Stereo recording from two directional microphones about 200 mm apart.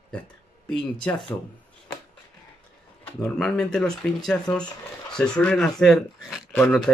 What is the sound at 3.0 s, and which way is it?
Speech, 5° left (ahead or behind).